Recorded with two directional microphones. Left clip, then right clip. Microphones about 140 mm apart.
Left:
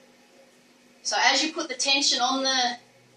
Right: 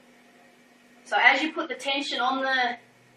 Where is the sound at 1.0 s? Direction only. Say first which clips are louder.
Right 2 dB; 10° left (ahead or behind).